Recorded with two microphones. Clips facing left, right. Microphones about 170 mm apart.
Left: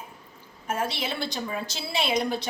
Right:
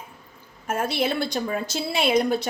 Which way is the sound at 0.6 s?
50° right (ahead or behind).